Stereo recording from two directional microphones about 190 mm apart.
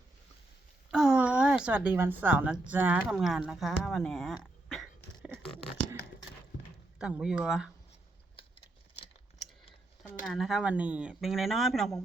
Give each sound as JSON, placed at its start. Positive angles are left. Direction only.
{"t": 0.9, "sound": "speech", "side_deg": -5}
{"t": 7.0, "sound": "speech", "side_deg": -5}
{"t": 8.4, "sound": "a sound", "side_deg": 30}
{"t": 10.2, "sound": "speech", "side_deg": 0}